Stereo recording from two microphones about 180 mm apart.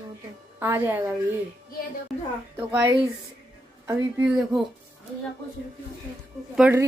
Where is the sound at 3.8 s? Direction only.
5° right (ahead or behind).